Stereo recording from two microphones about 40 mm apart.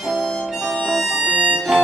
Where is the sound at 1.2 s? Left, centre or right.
Right.